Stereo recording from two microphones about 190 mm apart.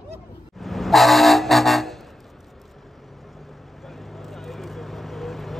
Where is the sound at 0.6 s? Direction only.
Centre (ahead or behind).